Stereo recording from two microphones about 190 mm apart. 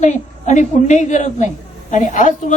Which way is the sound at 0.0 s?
40° left (ahead or behind).